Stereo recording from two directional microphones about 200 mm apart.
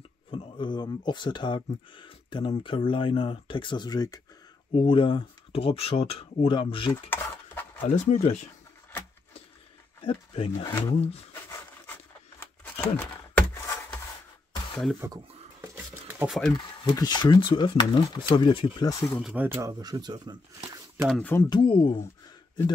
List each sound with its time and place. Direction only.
0.3 s speech: 25° left (ahead or behind)
6.9 s dishes: 10° left (ahead or behind)
7.8 s speech: 30° left (ahead or behind)
10.0 s speech: 25° left (ahead or behind)
10.5 s speech: 15° left (ahead or behind)
12.9 s a sound: 10° left (ahead or behind)
15.0 s speech: 15° right (ahead or behind)
15.6 s a sound: 10° right (ahead or behind)
16.3 s speech: centre (ahead or behind)
16.5 s speech: 20° left (ahead or behind)
19.2 s speech: 10° right (ahead or behind)
21.1 s speech: 10° left (ahead or behind)
21.5 s speech: 25° left (ahead or behind)